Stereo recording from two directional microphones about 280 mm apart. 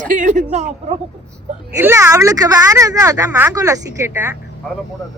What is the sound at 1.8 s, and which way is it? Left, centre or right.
Speech, centre.